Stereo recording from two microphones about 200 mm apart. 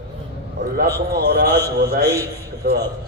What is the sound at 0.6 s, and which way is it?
A man's voice, 50° right (ahead or behind).